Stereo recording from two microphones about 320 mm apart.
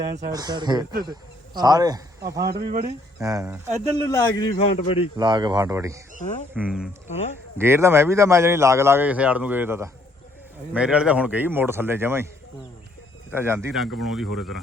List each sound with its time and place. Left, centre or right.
0.0 s speech: right
0.3 s speech: centre
4.0 s a man's voice: centre
5.1 s speech: centre
6.1 s speech: left
6.5 s speech: centre
13.3 s speech: centre